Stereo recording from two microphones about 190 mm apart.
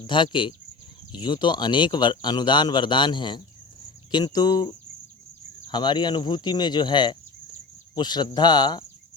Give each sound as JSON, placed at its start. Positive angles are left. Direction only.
{"t": 0.1, "sound": "speech", "side_deg": 25}